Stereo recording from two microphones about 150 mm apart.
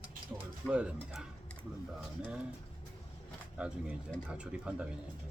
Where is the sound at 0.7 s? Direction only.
5° right (ahead or behind).